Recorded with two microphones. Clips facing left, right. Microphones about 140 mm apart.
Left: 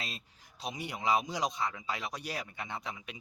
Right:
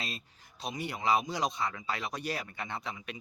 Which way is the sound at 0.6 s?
15° left (ahead or behind).